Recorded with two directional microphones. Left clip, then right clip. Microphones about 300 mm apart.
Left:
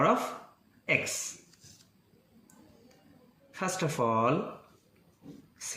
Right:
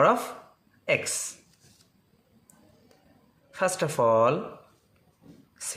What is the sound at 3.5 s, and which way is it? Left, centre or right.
Speech, right.